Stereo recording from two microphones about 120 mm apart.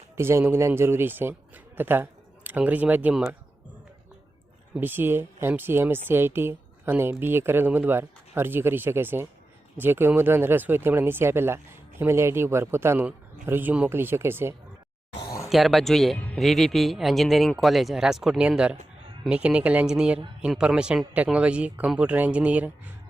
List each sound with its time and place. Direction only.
0.2 s speech: 20° right (ahead or behind)
4.7 s speech: 15° right (ahead or behind)
15.4 s speech: centre (ahead or behind)
16.1 s speech: 15° left (ahead or behind)
16.4 s speech: centre (ahead or behind)